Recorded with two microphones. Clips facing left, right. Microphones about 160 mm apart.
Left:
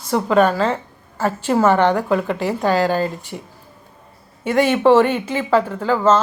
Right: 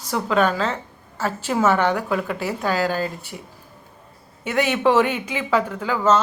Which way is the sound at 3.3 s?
50° left (ahead or behind).